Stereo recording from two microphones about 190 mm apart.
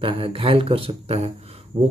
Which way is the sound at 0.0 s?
30° right (ahead or behind).